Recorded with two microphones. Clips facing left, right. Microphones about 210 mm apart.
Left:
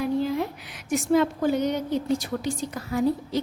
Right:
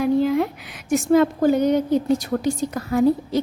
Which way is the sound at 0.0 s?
70° right (ahead or behind).